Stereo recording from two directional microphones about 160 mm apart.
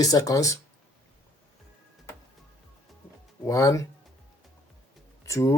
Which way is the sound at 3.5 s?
20° left (ahead or behind).